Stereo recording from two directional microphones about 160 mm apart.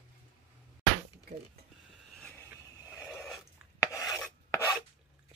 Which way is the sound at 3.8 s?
20° left (ahead or behind).